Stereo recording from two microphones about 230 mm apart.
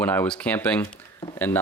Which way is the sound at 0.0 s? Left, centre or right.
Centre.